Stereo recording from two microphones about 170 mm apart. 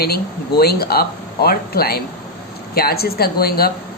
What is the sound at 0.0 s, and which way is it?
Speech, 65° left (ahead or behind).